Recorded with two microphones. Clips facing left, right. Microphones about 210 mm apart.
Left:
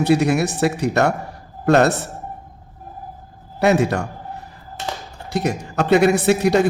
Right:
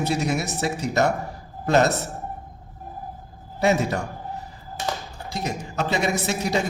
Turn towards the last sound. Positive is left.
turn(degrees=65)  # may be behind; listen again after turning